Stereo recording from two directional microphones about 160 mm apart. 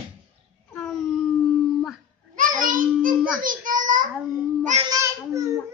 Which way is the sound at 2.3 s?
55° right (ahead or behind).